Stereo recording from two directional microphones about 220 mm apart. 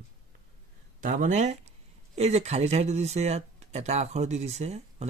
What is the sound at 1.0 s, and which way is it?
Speech, 35° right (ahead or behind).